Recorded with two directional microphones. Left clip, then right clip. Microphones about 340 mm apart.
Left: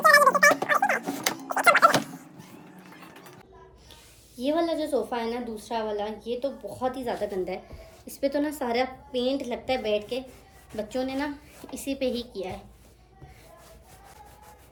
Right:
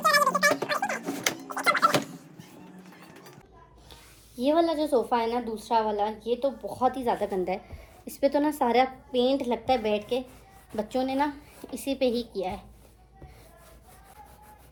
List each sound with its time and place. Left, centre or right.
0.0 s music: centre
1.5 s a sound: centre
4.4 s a woman's voice: centre